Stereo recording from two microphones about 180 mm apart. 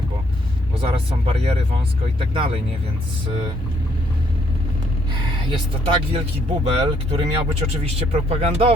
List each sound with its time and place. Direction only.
0.8 s speech: 30° right (ahead or behind)
5.5 s speech: 30° right (ahead or behind)